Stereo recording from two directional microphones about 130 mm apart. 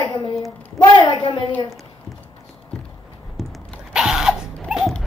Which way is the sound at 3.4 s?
Centre (ahead or behind).